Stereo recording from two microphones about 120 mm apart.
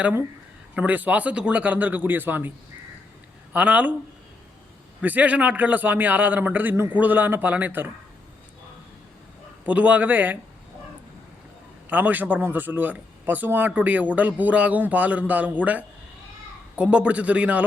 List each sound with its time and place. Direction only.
0.0 s speech: 20° right (ahead or behind)
3.5 s speech: 10° right (ahead or behind)
5.0 s speech: 10° right (ahead or behind)
9.6 s speech: 10° right (ahead or behind)
11.9 s speech: 15° right (ahead or behind)